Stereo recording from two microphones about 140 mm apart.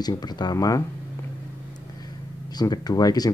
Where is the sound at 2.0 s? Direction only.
30° left (ahead or behind).